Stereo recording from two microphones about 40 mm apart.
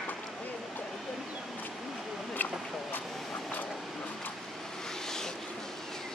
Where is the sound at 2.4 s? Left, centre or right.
Left.